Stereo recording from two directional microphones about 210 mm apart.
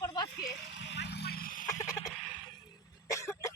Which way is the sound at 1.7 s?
15° left (ahead or behind).